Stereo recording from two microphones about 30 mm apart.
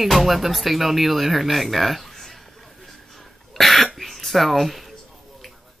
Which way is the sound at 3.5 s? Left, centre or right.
Centre.